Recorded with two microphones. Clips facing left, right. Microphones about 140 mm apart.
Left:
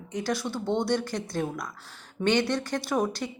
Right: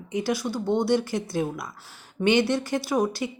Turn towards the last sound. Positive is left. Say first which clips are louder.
# right 3 dB
turn(degrees=-5)  # may be behind; listen again after turning